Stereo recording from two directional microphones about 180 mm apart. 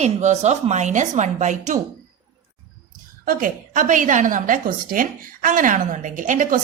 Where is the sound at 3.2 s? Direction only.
55° right (ahead or behind).